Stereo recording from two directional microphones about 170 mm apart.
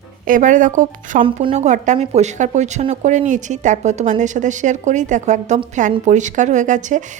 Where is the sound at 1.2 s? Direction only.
35° right (ahead or behind).